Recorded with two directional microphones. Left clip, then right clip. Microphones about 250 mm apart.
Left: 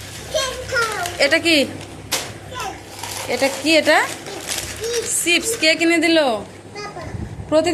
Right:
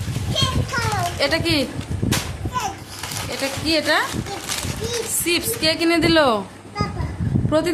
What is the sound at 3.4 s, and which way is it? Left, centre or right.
Speech, centre.